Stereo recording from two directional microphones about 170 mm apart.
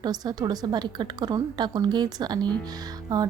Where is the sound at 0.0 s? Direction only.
25° right (ahead or behind).